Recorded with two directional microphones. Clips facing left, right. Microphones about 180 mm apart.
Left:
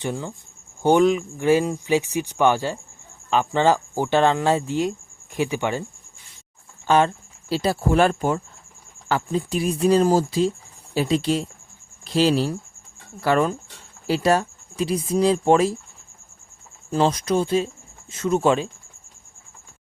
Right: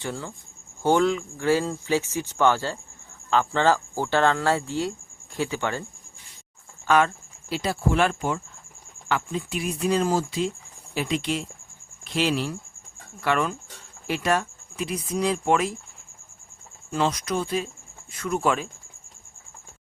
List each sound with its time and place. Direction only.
0.0 s speech: 20° left (ahead or behind)
6.8 s speech: 30° left (ahead or behind)
16.9 s speech: 30° left (ahead or behind)